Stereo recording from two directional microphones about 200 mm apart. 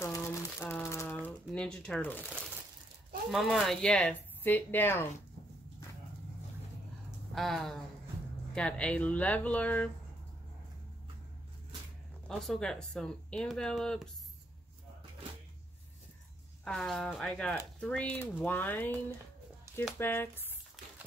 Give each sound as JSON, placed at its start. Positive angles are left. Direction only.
{"t": 0.0, "sound": "crumpling", "side_deg": 15}
{"t": 3.3, "sound": "speech", "side_deg": 0}
{"t": 7.3, "sound": "speech", "side_deg": 0}
{"t": 12.3, "sound": "speech", "side_deg": 0}
{"t": 16.6, "sound": "speech", "side_deg": 0}
{"t": 19.7, "sound": "a sound", "side_deg": -15}
{"t": 20.0, "sound": "speech", "side_deg": 10}